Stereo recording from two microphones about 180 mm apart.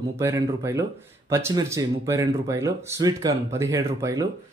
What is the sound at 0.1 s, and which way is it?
Speech, 15° right (ahead or behind).